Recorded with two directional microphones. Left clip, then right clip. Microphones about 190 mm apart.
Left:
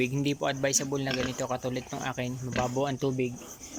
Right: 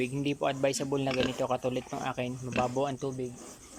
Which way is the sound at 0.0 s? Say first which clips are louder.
Left 2 dB; centre (ahead or behind).